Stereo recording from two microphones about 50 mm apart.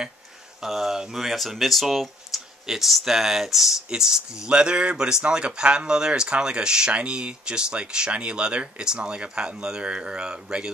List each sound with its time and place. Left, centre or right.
0.6 s speech: centre